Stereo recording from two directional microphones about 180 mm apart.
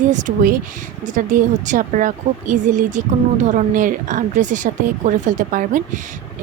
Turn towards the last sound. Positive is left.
turn(degrees=-45)  # may be behind; listen again after turning